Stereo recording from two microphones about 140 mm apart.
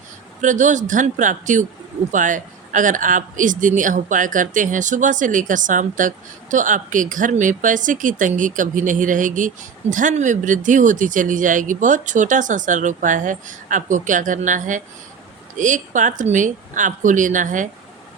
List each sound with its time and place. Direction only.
0.4 s speech: 60° right (ahead or behind)